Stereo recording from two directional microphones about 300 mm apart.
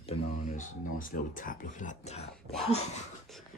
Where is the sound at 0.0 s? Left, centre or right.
Left.